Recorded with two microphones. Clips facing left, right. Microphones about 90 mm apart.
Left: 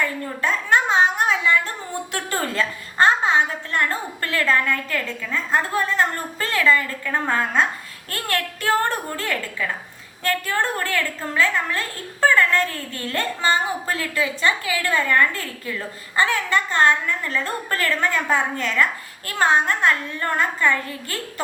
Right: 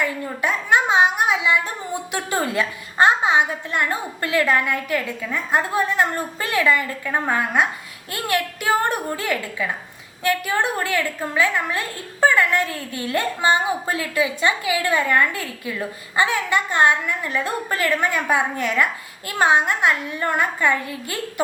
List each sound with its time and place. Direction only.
0.0 s a woman's voice: 15° right (ahead or behind)